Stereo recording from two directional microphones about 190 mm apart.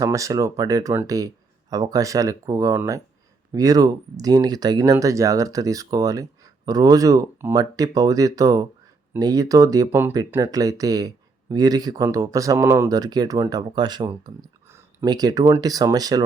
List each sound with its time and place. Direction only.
0.0 s speech: 15° right (ahead or behind)